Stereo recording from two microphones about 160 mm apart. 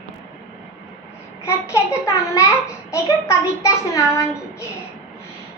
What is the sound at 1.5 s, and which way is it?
Speech, 15° left (ahead or behind).